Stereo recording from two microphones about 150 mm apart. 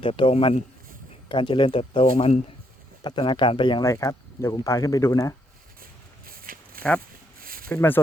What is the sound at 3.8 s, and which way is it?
Speech, 20° left (ahead or behind).